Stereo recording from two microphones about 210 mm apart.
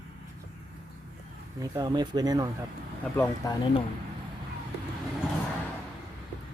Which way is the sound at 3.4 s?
15° left (ahead or behind).